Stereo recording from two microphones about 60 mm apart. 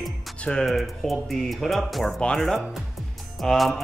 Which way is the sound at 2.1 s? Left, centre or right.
Centre.